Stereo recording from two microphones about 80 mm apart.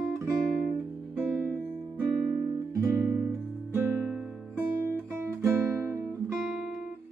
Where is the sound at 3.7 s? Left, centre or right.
Right.